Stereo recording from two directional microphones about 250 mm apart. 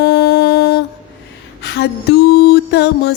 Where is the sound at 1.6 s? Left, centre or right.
Left.